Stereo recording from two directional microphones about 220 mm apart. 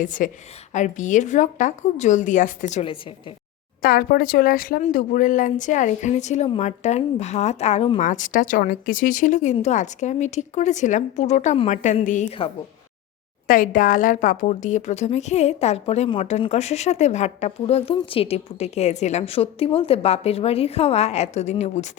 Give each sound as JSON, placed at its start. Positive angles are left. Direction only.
{"t": 0.0, "sound": "speech", "side_deg": 35}
{"t": 3.8, "sound": "speech", "side_deg": 40}
{"t": 13.5, "sound": "a woman's voice", "side_deg": 40}